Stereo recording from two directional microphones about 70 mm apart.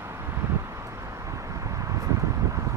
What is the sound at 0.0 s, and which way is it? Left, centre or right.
Vehicle, right.